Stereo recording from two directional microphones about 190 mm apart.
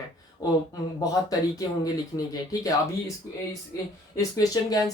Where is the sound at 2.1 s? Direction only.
20° left (ahead or behind).